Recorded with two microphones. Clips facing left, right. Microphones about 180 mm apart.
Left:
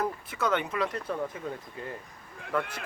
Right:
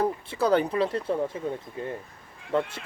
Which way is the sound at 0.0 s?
30° right (ahead or behind).